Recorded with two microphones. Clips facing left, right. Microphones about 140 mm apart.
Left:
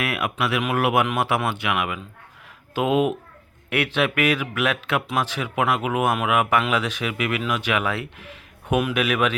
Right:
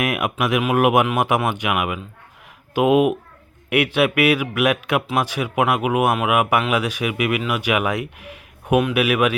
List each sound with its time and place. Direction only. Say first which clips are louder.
0.0 s speech: right 3 dB; 15° right (ahead or behind)